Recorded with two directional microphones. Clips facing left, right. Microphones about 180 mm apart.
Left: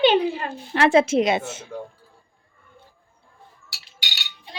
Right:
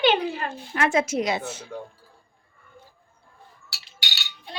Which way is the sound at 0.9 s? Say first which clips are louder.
Left 7 dB; 30° left (ahead or behind).